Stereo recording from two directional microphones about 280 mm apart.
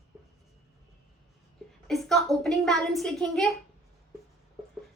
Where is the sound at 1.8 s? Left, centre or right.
Centre.